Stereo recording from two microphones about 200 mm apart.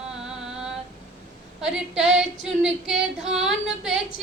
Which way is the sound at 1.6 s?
5° right (ahead or behind).